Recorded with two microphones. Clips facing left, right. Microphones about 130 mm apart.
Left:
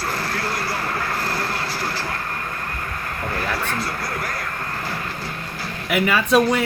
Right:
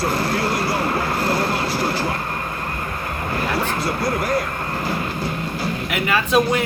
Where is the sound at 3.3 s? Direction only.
20° right (ahead or behind).